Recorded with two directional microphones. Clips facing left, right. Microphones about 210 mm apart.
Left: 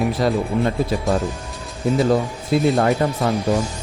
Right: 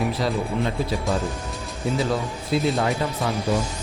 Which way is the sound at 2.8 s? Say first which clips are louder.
Left 6 dB; 50° left (ahead or behind).